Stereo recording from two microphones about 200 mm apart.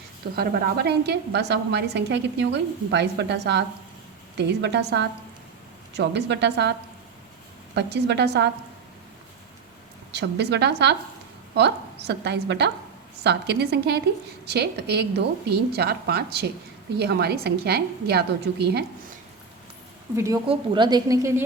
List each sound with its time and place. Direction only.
0.3 s a woman's voice: 55° right (ahead or behind)
7.8 s a woman's voice: 60° right (ahead or behind)
10.1 s a woman's voice: 55° right (ahead or behind)
20.1 s a woman's voice: 15° right (ahead or behind)